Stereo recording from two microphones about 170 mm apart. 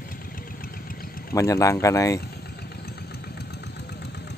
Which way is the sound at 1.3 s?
20° left (ahead or behind).